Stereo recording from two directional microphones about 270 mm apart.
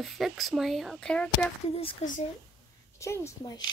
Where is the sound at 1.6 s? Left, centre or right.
Left.